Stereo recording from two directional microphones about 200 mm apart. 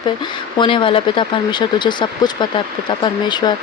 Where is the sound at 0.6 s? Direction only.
25° left (ahead or behind).